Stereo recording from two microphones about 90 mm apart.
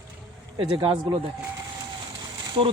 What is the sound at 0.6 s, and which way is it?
Speech, 70° right (ahead or behind).